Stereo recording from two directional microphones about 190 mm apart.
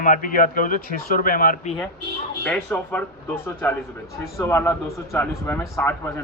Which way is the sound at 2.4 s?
10° left (ahead or behind).